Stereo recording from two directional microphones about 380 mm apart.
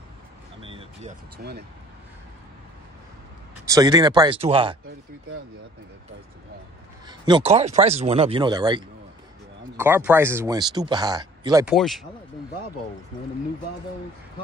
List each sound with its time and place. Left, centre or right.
0.6 s vehicle: centre
1.4 s speech: right
3.6 s speech: centre
7.1 s speech: centre